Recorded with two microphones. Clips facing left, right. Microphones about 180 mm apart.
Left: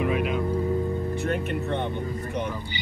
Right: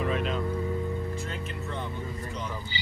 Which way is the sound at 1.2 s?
65° left (ahead or behind).